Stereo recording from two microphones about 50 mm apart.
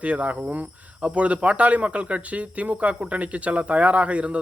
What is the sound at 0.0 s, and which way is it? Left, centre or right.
Speech, right.